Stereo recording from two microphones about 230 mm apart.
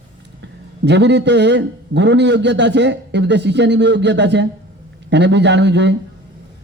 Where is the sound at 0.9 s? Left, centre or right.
Right.